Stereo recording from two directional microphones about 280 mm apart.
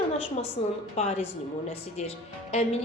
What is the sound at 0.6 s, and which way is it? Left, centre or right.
A woman's voice, centre.